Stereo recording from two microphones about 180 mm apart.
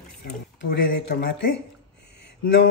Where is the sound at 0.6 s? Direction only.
70° left (ahead or behind).